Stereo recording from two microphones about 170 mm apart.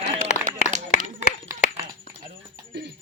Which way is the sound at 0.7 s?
45° right (ahead or behind).